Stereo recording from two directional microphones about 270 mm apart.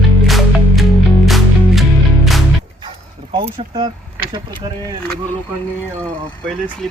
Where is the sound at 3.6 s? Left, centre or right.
Centre.